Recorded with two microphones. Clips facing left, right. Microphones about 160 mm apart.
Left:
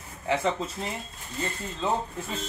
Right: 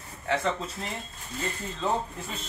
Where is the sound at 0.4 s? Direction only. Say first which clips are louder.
Left 2 dB; centre (ahead or behind).